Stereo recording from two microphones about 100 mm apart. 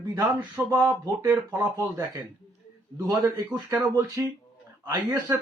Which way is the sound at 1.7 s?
35° right (ahead or behind).